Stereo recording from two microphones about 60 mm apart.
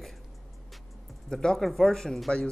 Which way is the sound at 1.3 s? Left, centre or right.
Centre.